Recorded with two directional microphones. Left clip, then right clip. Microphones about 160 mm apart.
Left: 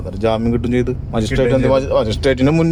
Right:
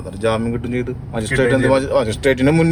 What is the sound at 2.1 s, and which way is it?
Speech, 10° left (ahead or behind).